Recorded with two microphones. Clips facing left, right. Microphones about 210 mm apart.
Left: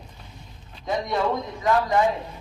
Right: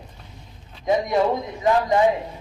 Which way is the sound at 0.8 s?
15° right (ahead or behind).